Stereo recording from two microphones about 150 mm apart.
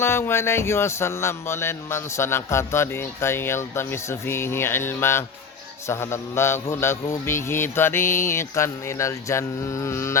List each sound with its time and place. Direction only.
0.0 s music: 15° left (ahead or behind)